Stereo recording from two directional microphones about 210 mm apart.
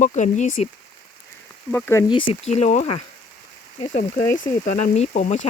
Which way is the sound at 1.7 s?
15° left (ahead or behind).